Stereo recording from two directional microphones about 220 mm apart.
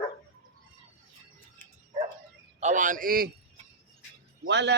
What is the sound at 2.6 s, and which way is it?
Speech, 35° right (ahead or behind).